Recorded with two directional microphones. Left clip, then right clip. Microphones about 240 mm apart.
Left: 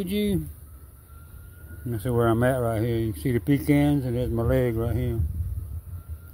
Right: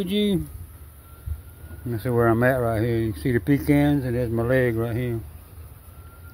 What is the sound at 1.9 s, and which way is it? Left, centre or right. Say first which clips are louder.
Speech: right 3 dB; centre.